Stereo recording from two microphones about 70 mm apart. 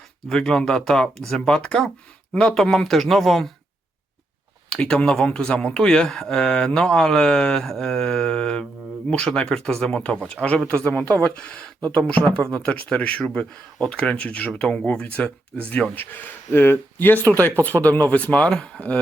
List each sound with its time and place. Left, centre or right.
0.3 s speech: centre
4.7 s speech: centre
16.0 s speech: left